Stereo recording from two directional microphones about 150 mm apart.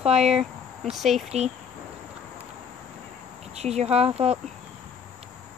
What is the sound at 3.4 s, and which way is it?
Speech, 45° right (ahead or behind).